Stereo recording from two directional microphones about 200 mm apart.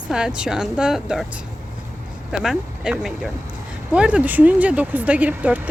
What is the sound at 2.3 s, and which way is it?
A woman's voice, 5° right (ahead or behind).